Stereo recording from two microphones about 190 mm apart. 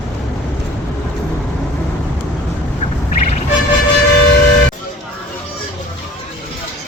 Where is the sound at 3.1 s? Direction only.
40° left (ahead or behind).